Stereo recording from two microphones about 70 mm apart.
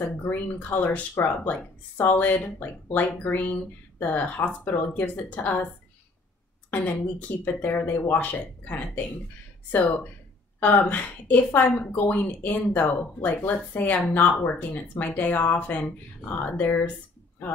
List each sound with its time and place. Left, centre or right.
0.0 s a woman's voice: left
6.7 s a woman's voice: left
10.6 s a woman's voice: left